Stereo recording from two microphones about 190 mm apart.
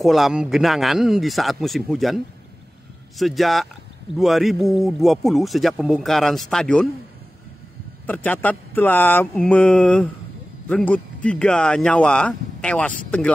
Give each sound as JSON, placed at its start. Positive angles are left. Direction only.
{"t": 0.0, "sound": "speech", "side_deg": 0}
{"t": 8.1, "sound": "mantra", "side_deg": 10}
{"t": 10.7, "sound": "speech", "side_deg": 5}